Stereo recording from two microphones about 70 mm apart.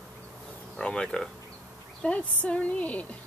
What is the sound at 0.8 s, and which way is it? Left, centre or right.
A woman's voice, centre.